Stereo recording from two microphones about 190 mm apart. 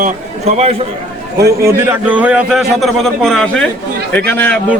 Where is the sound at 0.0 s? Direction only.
35° right (ahead or behind).